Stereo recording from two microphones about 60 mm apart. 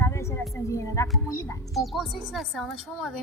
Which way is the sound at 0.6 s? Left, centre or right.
Left.